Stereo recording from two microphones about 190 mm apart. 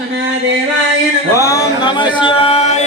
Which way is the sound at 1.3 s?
15° left (ahead or behind).